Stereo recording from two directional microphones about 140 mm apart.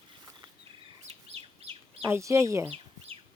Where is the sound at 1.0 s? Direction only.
50° right (ahead or behind).